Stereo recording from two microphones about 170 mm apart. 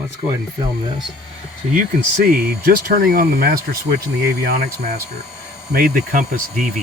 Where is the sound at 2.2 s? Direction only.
65° right (ahead or behind).